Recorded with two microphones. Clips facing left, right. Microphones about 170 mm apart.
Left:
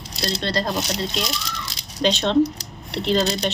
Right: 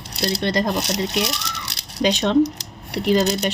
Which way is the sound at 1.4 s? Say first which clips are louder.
Even; 70° right (ahead or behind).